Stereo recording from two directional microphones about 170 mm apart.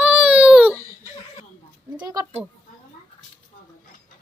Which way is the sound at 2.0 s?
20° right (ahead or behind).